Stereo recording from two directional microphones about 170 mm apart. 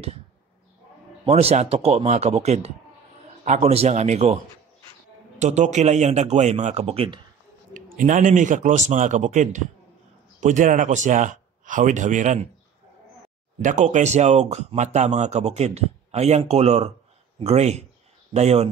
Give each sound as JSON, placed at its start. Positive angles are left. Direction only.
{"t": 1.2, "sound": "speech", "side_deg": -40}
{"t": 5.4, "sound": "speech", "side_deg": -45}
{"t": 7.7, "sound": "speech", "side_deg": -50}
{"t": 13.6, "sound": "speech", "side_deg": -45}